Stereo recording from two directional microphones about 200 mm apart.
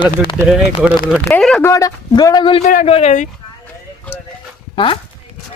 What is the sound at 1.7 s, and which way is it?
Speech, 15° left (ahead or behind).